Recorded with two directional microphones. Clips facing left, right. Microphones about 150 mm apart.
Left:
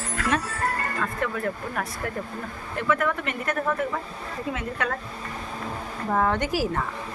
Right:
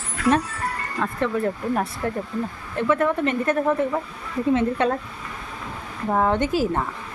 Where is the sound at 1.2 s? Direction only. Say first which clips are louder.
Right 7 dB; 30° right (ahead or behind).